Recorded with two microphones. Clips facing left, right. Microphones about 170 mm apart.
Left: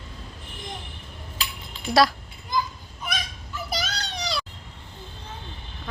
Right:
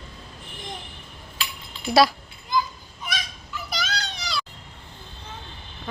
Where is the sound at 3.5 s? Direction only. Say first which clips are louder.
Left 1 dB; 45° left (ahead or behind).